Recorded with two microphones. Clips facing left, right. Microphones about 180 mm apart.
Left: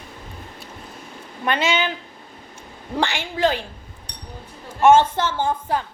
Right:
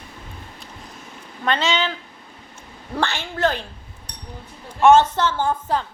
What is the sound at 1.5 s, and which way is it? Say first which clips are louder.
A woman's voice: even; 10° left (ahead or behind).